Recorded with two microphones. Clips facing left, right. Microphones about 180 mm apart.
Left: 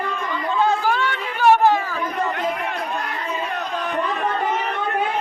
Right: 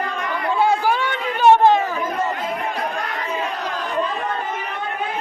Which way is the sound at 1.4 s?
20° right (ahead or behind).